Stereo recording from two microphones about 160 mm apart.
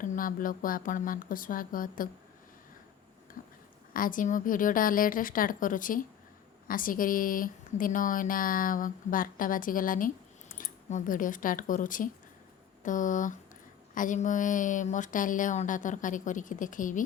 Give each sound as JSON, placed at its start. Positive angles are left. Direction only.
{"t": 0.0, "sound": "speech", "side_deg": 60}
{"t": 3.4, "sound": "a sound", "side_deg": 60}
{"t": 3.9, "sound": "a woman's voice", "side_deg": 60}